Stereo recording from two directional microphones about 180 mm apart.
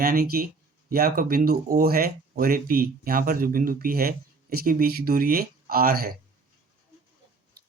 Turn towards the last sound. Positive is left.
turn(degrees=-55)  # may be behind; listen again after turning